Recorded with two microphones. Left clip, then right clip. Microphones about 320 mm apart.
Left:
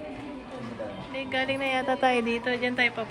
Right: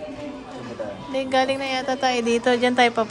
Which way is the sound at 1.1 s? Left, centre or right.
Centre.